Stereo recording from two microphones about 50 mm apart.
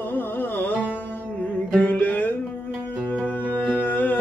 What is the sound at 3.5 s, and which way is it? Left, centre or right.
Music, left.